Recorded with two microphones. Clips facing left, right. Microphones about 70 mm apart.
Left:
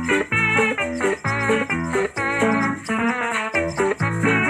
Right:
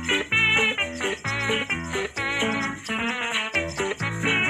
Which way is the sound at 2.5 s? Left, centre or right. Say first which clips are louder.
Left 7 dB; left.